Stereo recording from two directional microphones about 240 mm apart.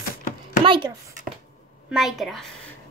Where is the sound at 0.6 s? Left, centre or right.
Right.